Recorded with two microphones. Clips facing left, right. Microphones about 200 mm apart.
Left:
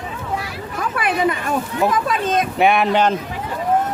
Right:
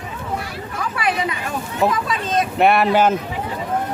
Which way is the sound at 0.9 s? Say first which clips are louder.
Left 4 dB; 50° left (ahead or behind).